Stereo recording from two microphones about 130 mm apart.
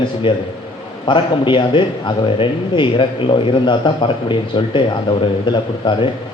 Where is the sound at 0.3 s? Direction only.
40° left (ahead or behind).